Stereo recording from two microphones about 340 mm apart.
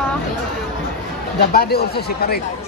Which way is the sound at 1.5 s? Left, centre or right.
Left.